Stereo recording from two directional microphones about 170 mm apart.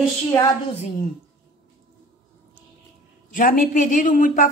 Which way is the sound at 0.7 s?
40° left (ahead or behind).